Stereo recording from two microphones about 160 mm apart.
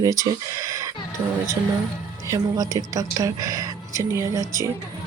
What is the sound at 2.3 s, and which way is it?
Speech, 20° right (ahead or behind).